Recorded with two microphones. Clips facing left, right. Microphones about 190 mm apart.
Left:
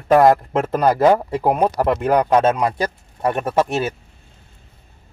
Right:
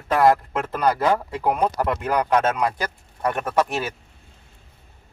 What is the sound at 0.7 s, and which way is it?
Speech, 45° left (ahead or behind).